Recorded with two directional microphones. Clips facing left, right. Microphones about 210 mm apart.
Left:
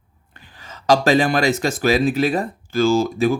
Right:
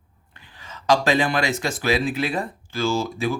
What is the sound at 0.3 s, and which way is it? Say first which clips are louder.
Speech: left 1 dB; 40° left (ahead or behind).